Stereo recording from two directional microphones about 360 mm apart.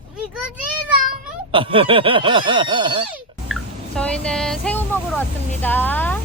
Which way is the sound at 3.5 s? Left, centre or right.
Centre.